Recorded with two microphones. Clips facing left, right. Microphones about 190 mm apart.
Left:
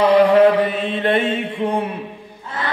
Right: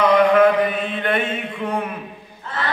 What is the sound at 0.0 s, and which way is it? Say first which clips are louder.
Mantra: left 2 dB; 30° left (ahead or behind).